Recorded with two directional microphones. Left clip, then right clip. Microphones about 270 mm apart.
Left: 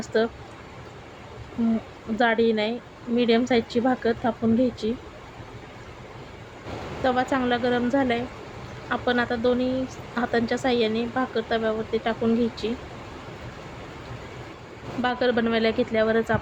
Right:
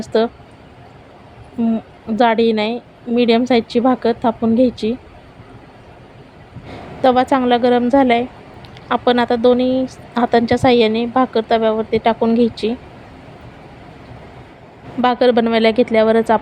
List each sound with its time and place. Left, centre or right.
0.0 s speech: right
2.1 s speech: right
7.0 s speech: right
15.0 s speech: right